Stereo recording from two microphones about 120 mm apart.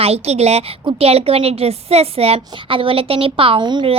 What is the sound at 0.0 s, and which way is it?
A woman's voice, 60° right (ahead or behind).